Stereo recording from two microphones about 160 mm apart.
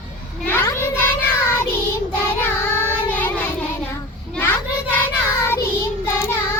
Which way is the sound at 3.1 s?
10° left (ahead or behind).